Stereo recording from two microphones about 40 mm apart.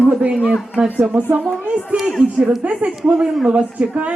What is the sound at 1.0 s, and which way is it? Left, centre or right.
Speech, right.